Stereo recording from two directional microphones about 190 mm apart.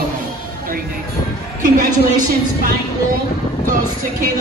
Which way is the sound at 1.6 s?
45° right (ahead or behind).